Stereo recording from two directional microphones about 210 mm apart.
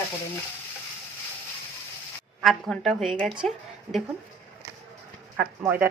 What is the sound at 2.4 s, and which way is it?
A woman's voice, centre (ahead or behind).